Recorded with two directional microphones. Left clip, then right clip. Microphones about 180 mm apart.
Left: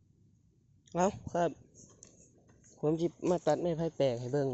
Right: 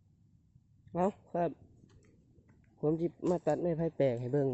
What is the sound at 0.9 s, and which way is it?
Speech, 15° right (ahead or behind).